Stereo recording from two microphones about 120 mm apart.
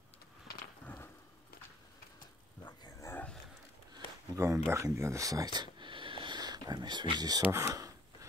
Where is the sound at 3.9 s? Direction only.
30° right (ahead or behind).